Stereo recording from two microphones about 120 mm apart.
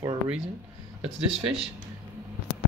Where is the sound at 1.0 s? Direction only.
55° right (ahead or behind).